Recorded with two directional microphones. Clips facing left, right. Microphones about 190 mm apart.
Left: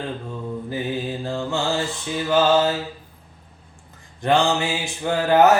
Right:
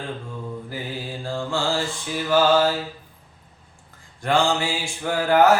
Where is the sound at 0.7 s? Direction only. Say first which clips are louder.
Left 6 dB; 20° left (ahead or behind).